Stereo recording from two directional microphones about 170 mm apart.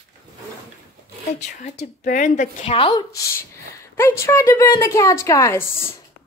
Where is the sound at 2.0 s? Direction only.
50° left (ahead or behind).